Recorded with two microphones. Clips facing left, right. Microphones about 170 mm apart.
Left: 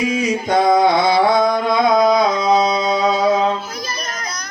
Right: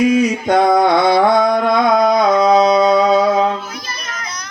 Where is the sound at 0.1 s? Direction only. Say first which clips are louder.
Right 4 dB; 60° right (ahead or behind).